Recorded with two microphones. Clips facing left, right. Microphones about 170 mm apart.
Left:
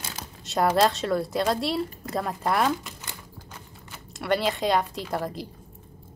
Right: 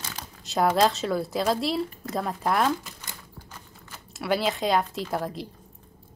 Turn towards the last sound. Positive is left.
turn(degrees=0)  # may be behind; listen again after turning